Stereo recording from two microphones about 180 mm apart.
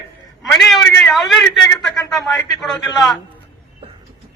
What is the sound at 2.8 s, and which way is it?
Speech, 20° left (ahead or behind).